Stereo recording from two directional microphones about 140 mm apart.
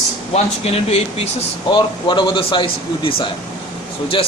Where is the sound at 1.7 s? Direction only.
35° left (ahead or behind).